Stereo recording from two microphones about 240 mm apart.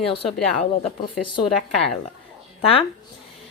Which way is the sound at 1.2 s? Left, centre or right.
Centre.